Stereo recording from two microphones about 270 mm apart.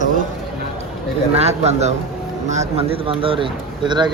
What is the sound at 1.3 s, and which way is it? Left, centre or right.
Speech, right.